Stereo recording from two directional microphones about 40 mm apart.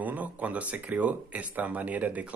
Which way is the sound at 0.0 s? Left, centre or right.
Right.